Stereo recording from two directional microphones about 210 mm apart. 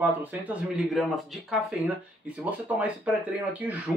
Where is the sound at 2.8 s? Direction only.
5° right (ahead or behind).